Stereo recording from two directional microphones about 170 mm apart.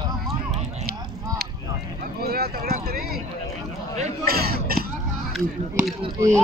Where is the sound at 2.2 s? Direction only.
65° right (ahead or behind).